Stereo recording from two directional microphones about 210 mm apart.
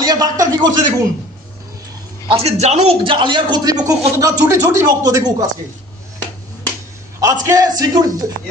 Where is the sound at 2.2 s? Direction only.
30° right (ahead or behind).